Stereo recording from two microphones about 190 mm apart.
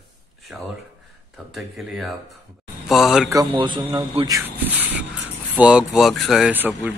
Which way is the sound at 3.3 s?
20° right (ahead or behind).